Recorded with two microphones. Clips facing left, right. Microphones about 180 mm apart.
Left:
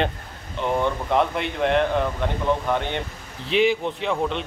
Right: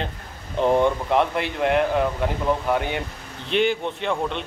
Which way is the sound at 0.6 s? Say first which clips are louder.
Right 6 dB; 35° right (ahead or behind).